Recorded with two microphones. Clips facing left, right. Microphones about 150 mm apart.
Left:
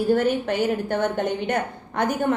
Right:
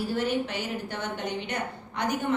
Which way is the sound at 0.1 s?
50° left (ahead or behind).